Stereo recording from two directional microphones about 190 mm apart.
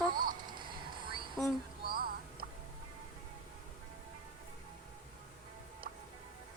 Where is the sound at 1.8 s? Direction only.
50° right (ahead or behind).